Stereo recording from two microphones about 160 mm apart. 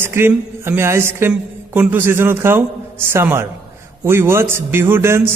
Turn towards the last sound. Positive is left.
turn(degrees=-15)  # may be behind; listen again after turning